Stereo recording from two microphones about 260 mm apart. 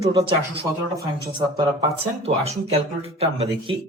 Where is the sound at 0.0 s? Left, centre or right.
Centre.